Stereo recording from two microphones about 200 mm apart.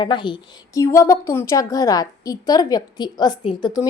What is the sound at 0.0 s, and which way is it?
A woman's voice, 25° left (ahead or behind).